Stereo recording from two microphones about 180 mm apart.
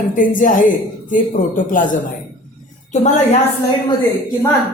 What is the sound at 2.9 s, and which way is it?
Speech, 40° left (ahead or behind).